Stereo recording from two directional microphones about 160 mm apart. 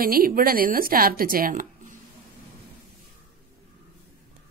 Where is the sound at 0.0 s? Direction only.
65° right (ahead or behind).